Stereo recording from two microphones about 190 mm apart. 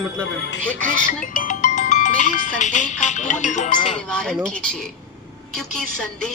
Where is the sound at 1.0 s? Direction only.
40° left (ahead or behind).